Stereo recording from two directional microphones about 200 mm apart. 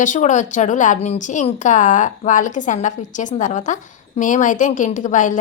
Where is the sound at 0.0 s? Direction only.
40° left (ahead or behind).